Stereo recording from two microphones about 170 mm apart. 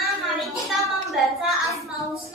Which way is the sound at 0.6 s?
Centre (ahead or behind).